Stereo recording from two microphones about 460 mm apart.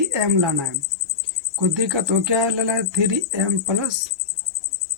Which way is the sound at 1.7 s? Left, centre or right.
Right.